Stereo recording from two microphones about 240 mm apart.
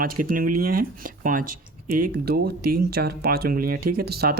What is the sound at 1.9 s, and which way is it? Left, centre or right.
Speech, right.